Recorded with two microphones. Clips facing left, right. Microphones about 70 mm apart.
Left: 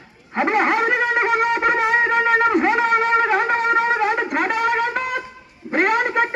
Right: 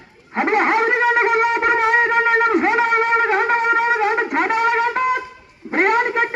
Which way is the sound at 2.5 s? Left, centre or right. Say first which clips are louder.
Right 1 dB; centre.